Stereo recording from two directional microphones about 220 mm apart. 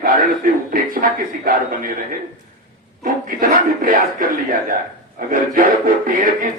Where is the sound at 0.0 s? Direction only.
40° right (ahead or behind).